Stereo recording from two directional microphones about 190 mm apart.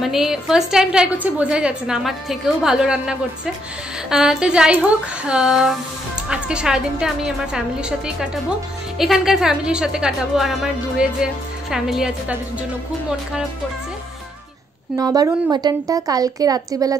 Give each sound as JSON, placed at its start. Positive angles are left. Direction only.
{"t": 0.0, "sound": "a woman's voice", "side_deg": 0}
{"t": 15.0, "sound": "a woman's voice", "side_deg": -20}